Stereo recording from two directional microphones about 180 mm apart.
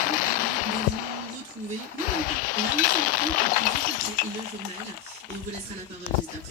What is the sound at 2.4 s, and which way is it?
Chink, 50° left (ahead or behind).